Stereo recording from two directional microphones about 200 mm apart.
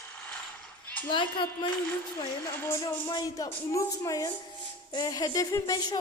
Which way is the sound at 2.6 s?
10° left (ahead or behind).